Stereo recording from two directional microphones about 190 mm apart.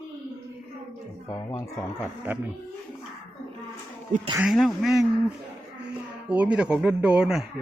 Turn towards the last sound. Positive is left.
turn(degrees=-5)  # may be behind; listen again after turning